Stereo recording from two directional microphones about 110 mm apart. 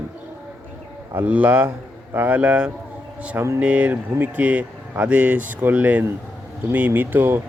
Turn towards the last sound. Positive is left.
turn(degrees=-20)  # may be behind; listen again after turning